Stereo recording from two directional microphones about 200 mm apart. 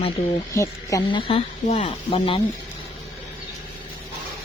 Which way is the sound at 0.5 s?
15° left (ahead or behind).